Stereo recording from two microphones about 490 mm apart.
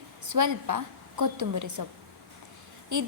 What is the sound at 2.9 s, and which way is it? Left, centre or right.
Speech, right.